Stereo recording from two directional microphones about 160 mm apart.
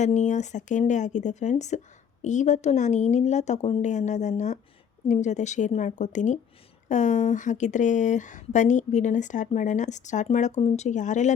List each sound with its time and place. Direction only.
0.0 s speech: 50° left (ahead or behind)